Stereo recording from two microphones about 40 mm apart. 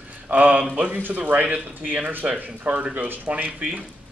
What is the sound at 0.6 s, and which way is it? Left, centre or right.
Speech, right.